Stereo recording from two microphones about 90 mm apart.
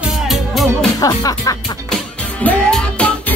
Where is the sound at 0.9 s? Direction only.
45° left (ahead or behind).